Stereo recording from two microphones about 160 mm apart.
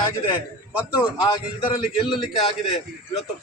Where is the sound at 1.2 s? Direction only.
30° left (ahead or behind).